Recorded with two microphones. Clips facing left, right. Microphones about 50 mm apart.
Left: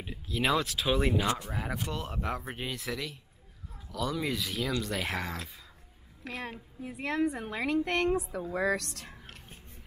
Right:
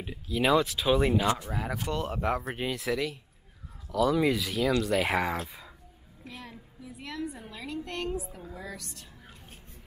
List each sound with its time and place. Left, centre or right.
0.0 s speech: centre
6.2 s a woman's voice: left
8.5 s speech: left